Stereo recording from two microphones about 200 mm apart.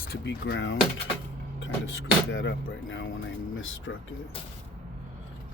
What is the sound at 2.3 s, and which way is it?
Speech, 65° left (ahead or behind).